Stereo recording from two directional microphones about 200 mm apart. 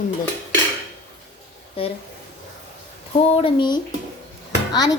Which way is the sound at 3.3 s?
30° left (ahead or behind).